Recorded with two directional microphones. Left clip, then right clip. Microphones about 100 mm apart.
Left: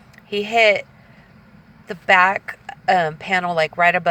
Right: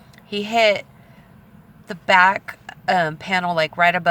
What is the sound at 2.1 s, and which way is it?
Speech, 15° right (ahead or behind).